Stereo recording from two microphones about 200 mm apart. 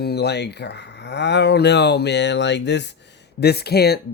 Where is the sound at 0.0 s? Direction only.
55° left (ahead or behind).